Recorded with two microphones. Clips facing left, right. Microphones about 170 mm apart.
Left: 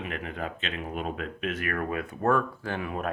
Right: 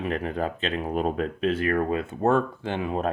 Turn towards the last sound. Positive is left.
turn(degrees=-25)  # may be behind; listen again after turning